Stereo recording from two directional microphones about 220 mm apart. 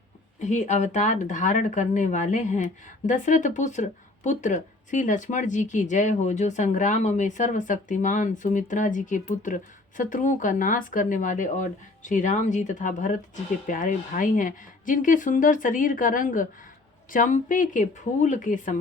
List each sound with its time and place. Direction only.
0.3 s speech: 35° left (ahead or behind)